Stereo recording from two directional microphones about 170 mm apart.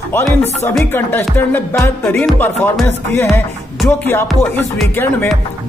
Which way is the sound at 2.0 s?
10° left (ahead or behind).